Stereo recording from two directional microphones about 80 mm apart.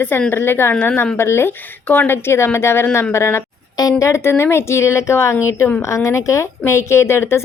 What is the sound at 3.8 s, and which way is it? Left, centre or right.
A woman's voice, left.